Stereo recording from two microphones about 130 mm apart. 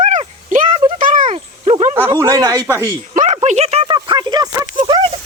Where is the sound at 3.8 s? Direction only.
35° right (ahead or behind).